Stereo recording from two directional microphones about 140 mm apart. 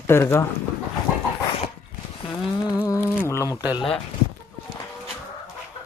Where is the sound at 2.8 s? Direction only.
20° left (ahead or behind).